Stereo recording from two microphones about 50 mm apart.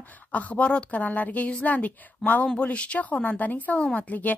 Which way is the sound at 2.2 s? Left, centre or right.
Centre.